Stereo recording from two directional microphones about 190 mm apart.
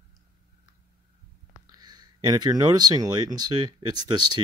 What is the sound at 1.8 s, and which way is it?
Speech, 20° right (ahead or behind).